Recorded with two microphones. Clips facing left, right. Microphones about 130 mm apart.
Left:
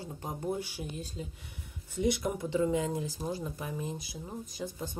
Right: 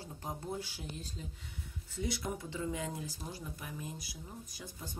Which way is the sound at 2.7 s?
25° left (ahead or behind).